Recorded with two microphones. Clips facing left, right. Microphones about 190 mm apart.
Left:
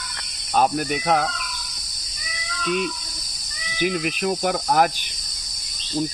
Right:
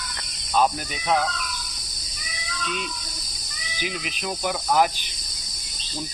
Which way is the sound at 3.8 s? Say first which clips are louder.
Left 9 dB; 55° left (ahead or behind).